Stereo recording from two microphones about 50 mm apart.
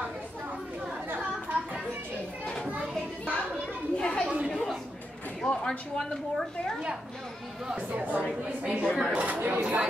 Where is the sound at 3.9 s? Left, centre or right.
Centre.